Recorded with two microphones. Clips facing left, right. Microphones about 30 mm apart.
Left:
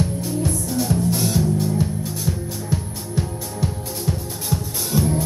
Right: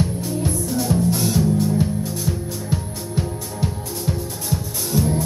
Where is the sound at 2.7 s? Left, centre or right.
Centre.